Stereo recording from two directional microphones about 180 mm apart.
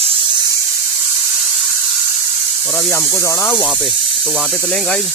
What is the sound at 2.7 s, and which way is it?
Speech, 10° left (ahead or behind).